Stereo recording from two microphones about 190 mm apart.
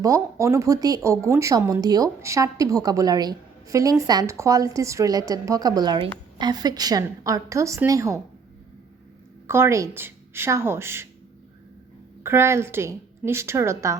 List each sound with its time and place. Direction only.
0.0 s speech: 15° right (ahead or behind)
9.5 s speech: 15° right (ahead or behind)
12.2 s speech: 15° right (ahead or behind)